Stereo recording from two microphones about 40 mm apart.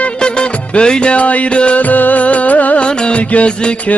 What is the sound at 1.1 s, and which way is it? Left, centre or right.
Music, left.